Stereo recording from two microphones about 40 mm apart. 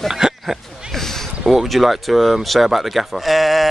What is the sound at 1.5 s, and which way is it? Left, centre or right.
Speech, centre.